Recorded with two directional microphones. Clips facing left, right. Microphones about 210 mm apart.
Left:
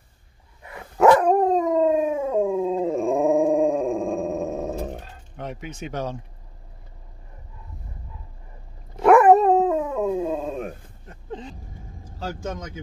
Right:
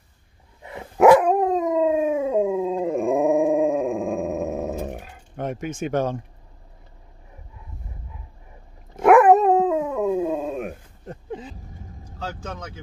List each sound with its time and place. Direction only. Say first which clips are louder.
0.6 s dog: right 4 dB; 25° right (ahead or behind)
0.9 s dog: right 2 dB; 10° right (ahead or behind)
5.4 s speech: right 6 dB; 50° right (ahead or behind)
9.0 s dog: even; 5° right (ahead or behind)
11.2 s vehicle: even; 5° right (ahead or behind)
12.2 s speech: left 2 dB; 10° left (ahead or behind)